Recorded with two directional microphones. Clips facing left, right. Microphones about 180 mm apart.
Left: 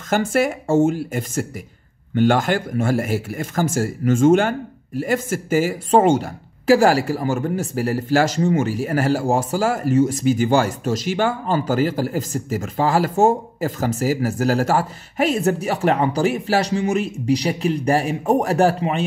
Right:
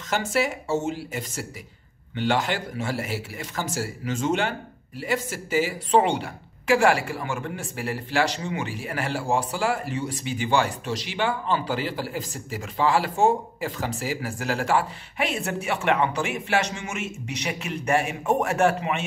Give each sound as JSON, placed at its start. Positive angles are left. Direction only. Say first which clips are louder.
{"t": 0.1, "sound": "speech", "louder": "left 6 dB", "side_deg": 50}